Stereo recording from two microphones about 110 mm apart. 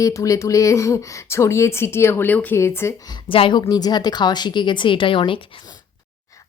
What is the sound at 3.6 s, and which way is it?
Speech, 35° left (ahead or behind).